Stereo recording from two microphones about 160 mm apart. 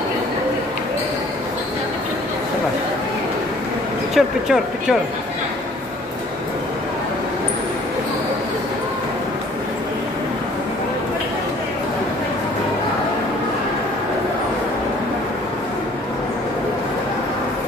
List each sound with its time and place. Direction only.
4.1 s speech: 5° right (ahead or behind)